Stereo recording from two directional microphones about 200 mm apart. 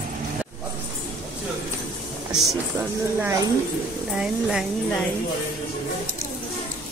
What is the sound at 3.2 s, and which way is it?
Speech, 15° right (ahead or behind).